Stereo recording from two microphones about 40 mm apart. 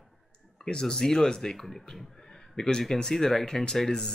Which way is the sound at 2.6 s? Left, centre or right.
Centre.